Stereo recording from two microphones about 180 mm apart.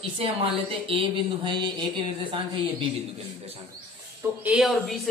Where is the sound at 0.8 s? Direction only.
25° right (ahead or behind).